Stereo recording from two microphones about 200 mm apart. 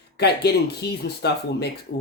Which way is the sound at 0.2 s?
55° left (ahead or behind).